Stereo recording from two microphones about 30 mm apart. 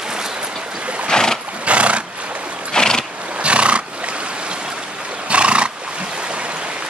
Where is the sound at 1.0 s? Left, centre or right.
Centre.